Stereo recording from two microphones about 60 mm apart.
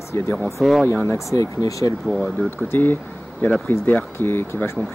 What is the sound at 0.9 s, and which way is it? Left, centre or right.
Speech, left.